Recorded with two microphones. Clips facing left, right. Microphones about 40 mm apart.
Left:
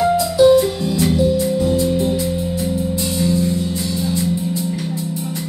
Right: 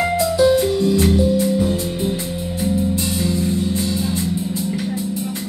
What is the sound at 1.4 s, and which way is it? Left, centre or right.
Music, centre.